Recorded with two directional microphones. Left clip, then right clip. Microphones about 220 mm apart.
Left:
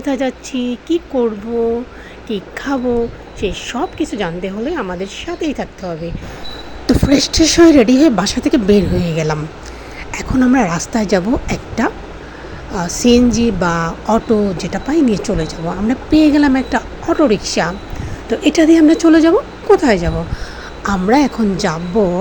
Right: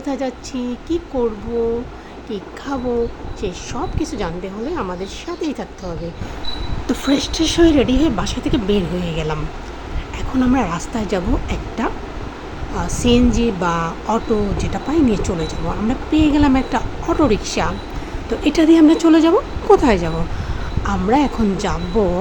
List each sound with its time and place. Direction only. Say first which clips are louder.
0.0 s a woman's voice: left 5 dB; 10° left (ahead or behind)
2.7 s a woman's voice: left 4 dB; 15° left (ahead or behind)
6.8 s a woman's voice: left 6 dB; 15° left (ahead or behind)